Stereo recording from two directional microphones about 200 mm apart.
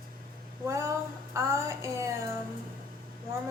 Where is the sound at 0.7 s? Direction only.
15° right (ahead or behind).